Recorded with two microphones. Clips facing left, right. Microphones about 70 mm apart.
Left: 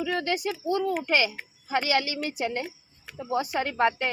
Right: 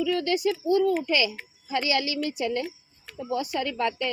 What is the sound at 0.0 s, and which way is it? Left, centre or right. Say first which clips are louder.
Speech: right 3 dB; left.